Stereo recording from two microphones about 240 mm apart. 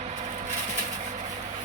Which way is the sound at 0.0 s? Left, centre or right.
Right.